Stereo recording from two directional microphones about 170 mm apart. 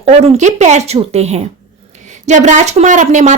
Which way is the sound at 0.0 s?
40° right (ahead or behind).